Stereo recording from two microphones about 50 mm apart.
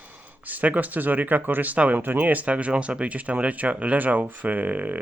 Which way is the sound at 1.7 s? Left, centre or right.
Right.